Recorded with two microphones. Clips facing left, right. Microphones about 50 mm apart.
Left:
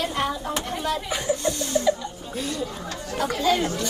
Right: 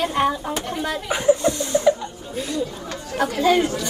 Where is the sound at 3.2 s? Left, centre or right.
Right.